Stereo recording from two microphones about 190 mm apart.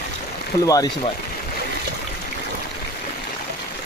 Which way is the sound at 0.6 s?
20° left (ahead or behind).